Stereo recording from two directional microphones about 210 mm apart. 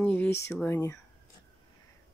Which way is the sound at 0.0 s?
5° left (ahead or behind).